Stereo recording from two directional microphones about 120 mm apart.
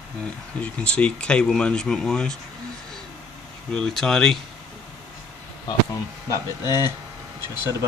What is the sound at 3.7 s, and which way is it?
Speech, 5° left (ahead or behind).